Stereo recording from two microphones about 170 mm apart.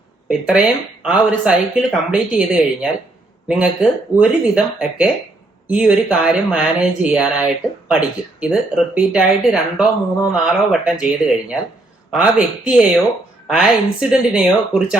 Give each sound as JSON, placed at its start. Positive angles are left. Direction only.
{"t": 0.3, "sound": "speech", "side_deg": -5}